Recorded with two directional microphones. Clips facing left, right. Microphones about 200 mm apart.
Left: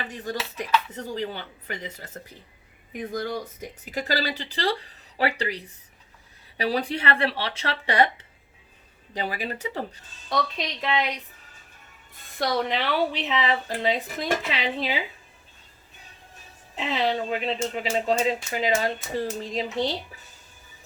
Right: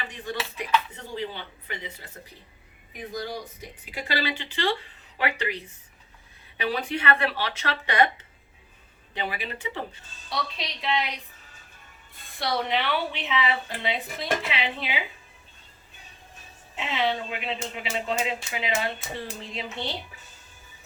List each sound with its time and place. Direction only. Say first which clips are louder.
0.1 s a sound: left 2 dB; 40° left (ahead or behind)
1.0 s speech: left 3 dB; 40° left (ahead or behind)
3.1 s speech: left 3 dB; 50° left (ahead or behind); by 8.1 s 30° left (ahead or behind)
9.1 s speech: left 3 dB; 40° left (ahead or behind)
12.4 s speech: left 2 dB; 40° left (ahead or behind)
16.7 s speech: left 2 dB; 35° left (ahead or behind)